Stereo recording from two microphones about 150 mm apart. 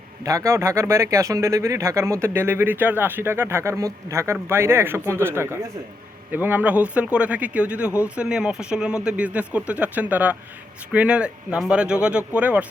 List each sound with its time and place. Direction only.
0.3 s speech: 20° right (ahead or behind)